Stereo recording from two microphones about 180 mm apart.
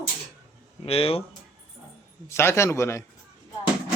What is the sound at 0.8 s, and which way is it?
Speech, 30° left (ahead or behind).